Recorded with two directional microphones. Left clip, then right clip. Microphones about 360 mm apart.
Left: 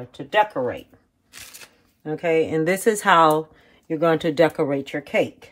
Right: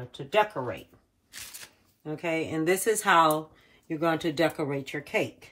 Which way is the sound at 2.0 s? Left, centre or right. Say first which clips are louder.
Left 10 dB; left.